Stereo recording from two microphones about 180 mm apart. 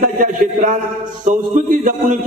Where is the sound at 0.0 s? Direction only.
45° right (ahead or behind).